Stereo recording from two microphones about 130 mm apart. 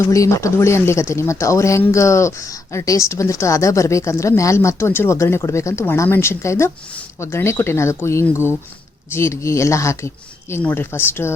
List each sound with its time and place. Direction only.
0.0 s speech: 25° left (ahead or behind)